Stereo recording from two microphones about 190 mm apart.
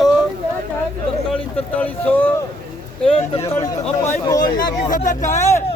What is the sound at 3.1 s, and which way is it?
Speech, 30° left (ahead or behind).